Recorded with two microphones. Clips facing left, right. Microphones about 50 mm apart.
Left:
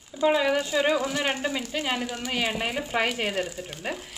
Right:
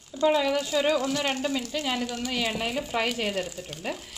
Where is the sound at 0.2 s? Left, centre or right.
Centre.